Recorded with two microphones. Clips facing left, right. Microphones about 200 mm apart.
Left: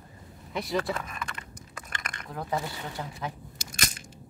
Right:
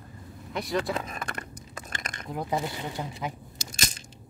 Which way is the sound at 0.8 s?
20° right (ahead or behind).